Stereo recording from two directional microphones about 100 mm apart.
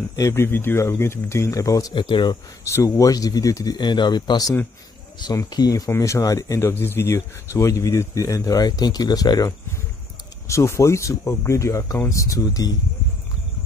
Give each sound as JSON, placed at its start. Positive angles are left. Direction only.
{"t": 0.1, "sound": "speech", "side_deg": 30}
{"t": 2.0, "sound": "speech", "side_deg": 50}
{"t": 2.6, "sound": "speech", "side_deg": 30}
{"t": 10.5, "sound": "speech", "side_deg": 30}